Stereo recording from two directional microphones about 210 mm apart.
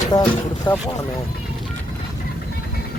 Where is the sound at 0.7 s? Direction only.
20° left (ahead or behind).